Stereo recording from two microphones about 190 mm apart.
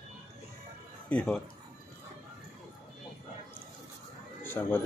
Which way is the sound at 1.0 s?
5° left (ahead or behind).